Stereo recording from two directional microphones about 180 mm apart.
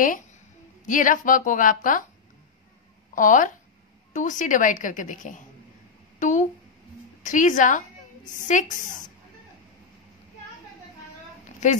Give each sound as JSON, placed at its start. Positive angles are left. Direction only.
{"t": 0.8, "sound": "a woman's voice", "side_deg": 45}
{"t": 3.2, "sound": "a woman's voice", "side_deg": 45}
{"t": 11.6, "sound": "speech", "side_deg": 40}